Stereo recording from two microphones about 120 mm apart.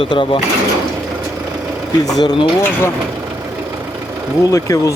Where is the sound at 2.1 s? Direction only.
35° left (ahead or behind).